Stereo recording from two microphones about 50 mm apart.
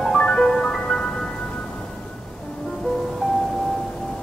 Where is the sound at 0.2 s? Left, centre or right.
Centre.